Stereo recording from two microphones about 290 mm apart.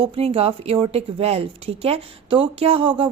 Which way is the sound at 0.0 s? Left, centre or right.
Centre.